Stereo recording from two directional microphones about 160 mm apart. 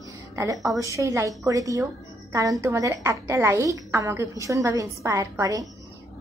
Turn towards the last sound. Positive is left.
turn(degrees=-20)  # may be behind; listen again after turning